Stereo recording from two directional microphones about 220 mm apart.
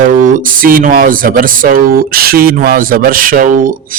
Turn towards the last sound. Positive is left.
turn(degrees=-35)  # may be behind; listen again after turning